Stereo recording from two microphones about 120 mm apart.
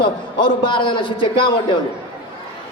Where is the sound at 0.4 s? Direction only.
40° left (ahead or behind).